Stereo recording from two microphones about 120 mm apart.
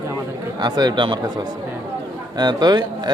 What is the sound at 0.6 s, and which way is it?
Speech, 35° right (ahead or behind).